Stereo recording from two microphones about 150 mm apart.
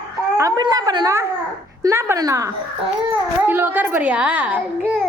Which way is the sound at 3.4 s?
15° right (ahead or behind).